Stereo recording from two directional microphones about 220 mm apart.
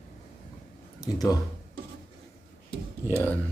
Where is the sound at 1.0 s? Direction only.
15° left (ahead or behind).